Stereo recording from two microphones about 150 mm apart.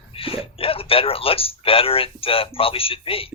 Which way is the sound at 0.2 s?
40° left (ahead or behind).